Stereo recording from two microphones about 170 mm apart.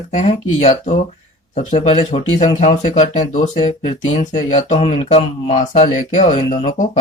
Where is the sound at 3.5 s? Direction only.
30° left (ahead or behind).